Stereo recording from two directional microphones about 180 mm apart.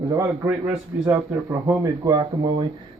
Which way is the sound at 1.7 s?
20° right (ahead or behind).